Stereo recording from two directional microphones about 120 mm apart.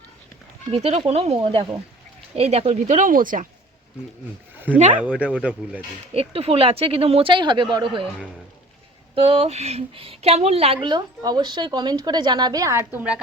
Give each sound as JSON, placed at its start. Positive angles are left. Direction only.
{"t": 0.7, "sound": "speech", "side_deg": -60}
{"t": 2.3, "sound": "speech", "side_deg": -55}
{"t": 4.9, "sound": "speech", "side_deg": -10}
{"t": 6.1, "sound": "speech", "side_deg": -55}
{"t": 9.1, "sound": "a woman's voice", "side_deg": -50}